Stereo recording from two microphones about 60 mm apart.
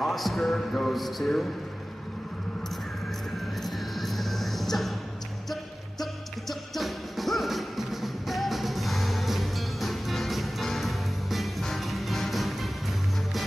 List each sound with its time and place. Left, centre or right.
0.0 s speech: centre
3.6 s music: centre
6.7 s music: centre